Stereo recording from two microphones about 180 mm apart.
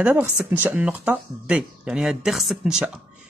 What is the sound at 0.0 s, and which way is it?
Speech, 10° right (ahead or behind).